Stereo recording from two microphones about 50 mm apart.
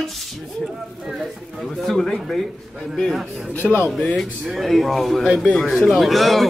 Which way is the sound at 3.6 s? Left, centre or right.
Centre.